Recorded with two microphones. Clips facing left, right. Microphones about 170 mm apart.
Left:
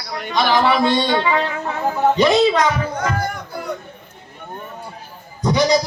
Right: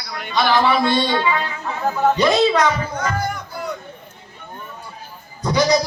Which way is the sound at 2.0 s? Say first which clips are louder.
Left 1 dB; 20° left (ahead or behind).